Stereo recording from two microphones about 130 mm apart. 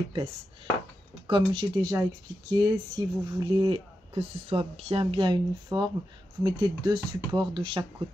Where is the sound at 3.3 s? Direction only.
35° right (ahead or behind).